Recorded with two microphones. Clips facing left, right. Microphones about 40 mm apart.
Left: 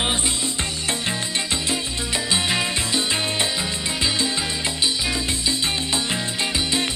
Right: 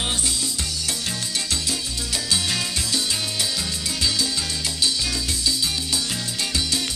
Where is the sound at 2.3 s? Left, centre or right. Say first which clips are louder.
Left 3 dB; left.